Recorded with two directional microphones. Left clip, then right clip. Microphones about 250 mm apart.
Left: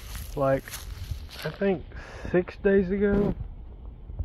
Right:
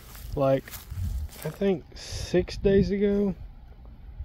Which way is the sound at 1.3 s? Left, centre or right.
Left.